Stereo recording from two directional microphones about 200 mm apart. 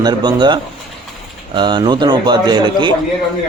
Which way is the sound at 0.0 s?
20° right (ahead or behind).